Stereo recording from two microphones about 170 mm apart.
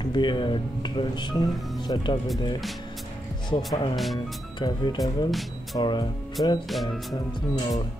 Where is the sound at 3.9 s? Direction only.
Centre (ahead or behind).